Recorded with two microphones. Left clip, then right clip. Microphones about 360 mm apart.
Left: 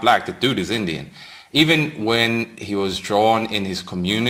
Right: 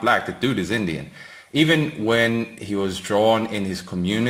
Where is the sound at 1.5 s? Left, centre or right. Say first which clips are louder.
Left 2 dB; left.